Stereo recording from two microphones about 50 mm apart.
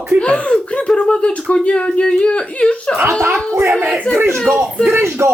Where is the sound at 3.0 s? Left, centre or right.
Right.